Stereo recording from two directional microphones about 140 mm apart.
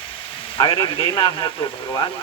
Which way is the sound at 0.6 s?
35° left (ahead or behind).